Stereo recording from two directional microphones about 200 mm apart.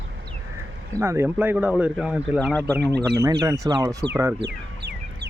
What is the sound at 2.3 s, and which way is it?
Speech, 5° left (ahead or behind).